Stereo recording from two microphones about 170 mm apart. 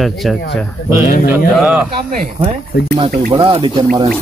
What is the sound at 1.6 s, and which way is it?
Speech, 5° right (ahead or behind).